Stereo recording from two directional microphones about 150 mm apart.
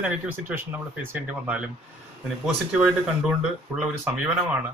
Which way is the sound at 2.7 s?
5° right (ahead or behind).